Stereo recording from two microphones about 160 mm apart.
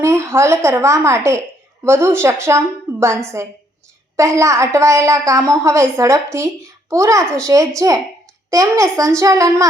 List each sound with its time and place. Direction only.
0.0 s a woman's voice: 15° right (ahead or behind)
4.2 s a woman's voice: 20° right (ahead or behind)